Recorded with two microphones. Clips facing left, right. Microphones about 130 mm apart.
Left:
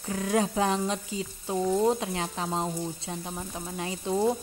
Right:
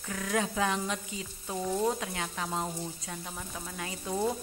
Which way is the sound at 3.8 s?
25° left (ahead or behind).